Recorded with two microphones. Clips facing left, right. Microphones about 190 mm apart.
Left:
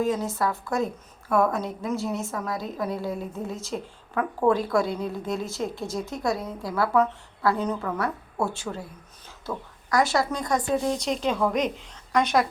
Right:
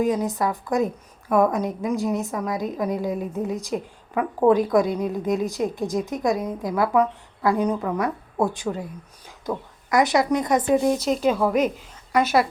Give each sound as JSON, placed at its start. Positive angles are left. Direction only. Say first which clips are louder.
{"t": 0.0, "sound": "a woman's voice", "louder": "right 3 dB", "side_deg": -15}
{"t": 10.9, "sound": "a woman's voice", "louder": "right 5 dB", "side_deg": -5}